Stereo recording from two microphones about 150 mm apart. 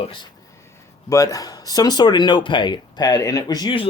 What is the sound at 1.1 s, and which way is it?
Speech, 25° left (ahead or behind).